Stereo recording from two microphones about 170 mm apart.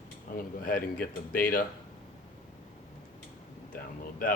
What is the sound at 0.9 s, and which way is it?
Speech, 55° left (ahead or behind).